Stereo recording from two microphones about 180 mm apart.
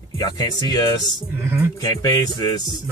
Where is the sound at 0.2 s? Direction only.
20° left (ahead or behind).